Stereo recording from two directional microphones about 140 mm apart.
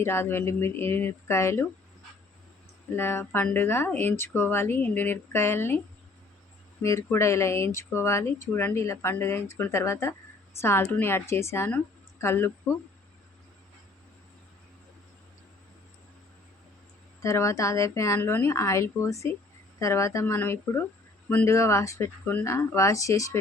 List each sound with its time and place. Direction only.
0.0 s speech: 15° left (ahead or behind)
2.9 s speech: 15° left (ahead or behind)
6.8 s speech: 20° left (ahead or behind)
17.2 s speech: 20° left (ahead or behind)